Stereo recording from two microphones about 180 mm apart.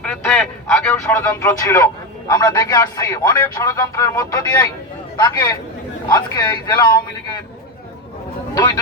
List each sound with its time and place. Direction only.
0.0 s a man's voice: 10° left (ahead or behind)
8.5 s a man's voice: 20° left (ahead or behind)